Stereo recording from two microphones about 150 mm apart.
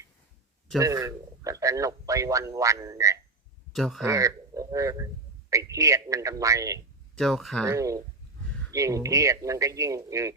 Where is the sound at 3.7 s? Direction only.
Centre (ahead or behind).